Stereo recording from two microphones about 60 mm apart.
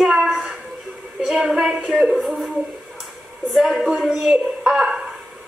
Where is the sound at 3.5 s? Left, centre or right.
Centre.